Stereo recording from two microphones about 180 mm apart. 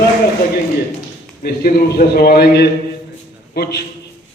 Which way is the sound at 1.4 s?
55° left (ahead or behind).